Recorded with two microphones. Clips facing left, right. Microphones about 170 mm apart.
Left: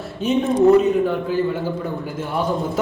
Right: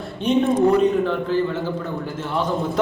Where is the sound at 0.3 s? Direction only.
5° left (ahead or behind).